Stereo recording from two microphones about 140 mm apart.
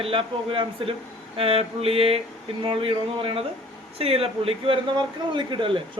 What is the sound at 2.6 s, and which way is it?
A man's voice, 40° right (ahead or behind).